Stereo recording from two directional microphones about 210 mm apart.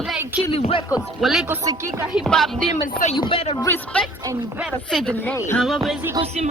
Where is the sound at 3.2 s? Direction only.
25° left (ahead or behind).